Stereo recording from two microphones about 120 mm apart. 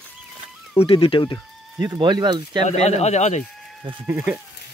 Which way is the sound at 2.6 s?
65° left (ahead or behind).